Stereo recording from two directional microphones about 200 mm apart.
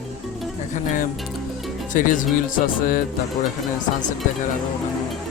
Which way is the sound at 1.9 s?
40° left (ahead or behind).